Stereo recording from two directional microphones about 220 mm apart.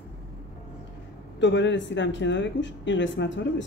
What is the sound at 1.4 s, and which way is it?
Speech, 55° left (ahead or behind).